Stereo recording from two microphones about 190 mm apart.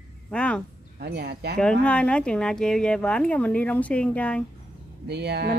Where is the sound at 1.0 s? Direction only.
60° right (ahead or behind).